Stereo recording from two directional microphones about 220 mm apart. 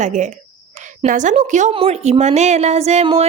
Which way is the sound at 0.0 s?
35° right (ahead or behind).